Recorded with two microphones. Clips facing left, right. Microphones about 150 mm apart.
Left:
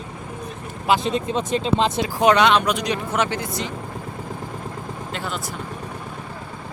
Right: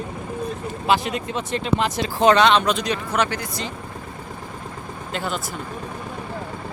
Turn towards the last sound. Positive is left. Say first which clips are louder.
# right 2 dB
turn(degrees=0)  # may be behind; listen again after turning